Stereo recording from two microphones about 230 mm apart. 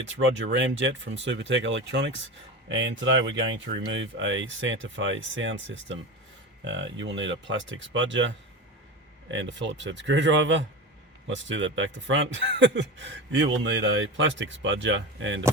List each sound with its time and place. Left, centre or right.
0.1 s speech: right
9.3 s speech: right